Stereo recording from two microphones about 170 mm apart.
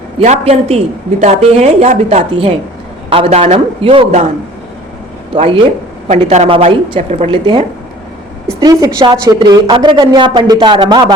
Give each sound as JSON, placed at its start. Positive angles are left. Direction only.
{"t": 0.2, "sound": "a woman's voice", "side_deg": -40}
{"t": 6.2, "sound": "a woman's voice", "side_deg": -35}
{"t": 8.6, "sound": "speech", "side_deg": -25}